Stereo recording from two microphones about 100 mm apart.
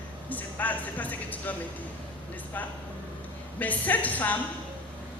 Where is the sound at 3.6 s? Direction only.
15° left (ahead or behind).